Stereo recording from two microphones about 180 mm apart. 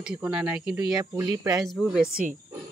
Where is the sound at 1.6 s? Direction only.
Centre (ahead or behind).